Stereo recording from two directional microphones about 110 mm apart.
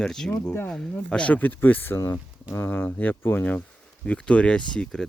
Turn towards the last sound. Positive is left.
turn(degrees=5)  # may be behind; listen again after turning